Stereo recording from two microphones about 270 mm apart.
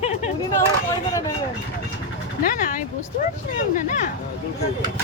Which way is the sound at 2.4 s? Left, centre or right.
Left.